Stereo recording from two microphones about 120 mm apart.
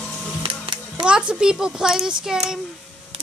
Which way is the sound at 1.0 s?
5° right (ahead or behind).